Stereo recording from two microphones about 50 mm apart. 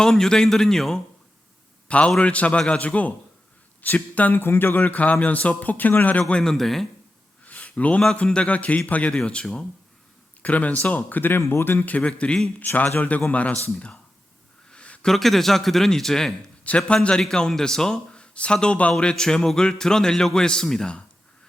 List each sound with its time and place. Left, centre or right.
0.0 s speech: centre
1.9 s a man's voice: left
4.4 s speech: left
6.4 s speech: centre
7.4 s a sound: left
8.1 s a man's voice: left
10.4 s speech: left
10.9 s speech: left
11.9 s a man's voice: left
12.5 s a man's voice: left
14.7 s a sound: left
15.0 s speech: centre
16.9 s a man's voice: left
18.1 s speech: left